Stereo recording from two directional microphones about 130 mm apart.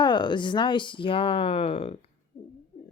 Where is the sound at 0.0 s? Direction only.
35° left (ahead or behind).